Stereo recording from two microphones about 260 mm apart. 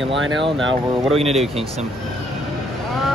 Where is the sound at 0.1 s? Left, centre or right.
Right.